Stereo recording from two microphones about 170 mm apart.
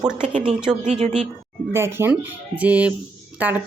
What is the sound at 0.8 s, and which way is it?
Speech, 40° right (ahead or behind).